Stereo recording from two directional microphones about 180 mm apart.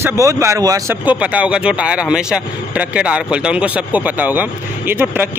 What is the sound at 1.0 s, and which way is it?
Speech, 10° right (ahead or behind).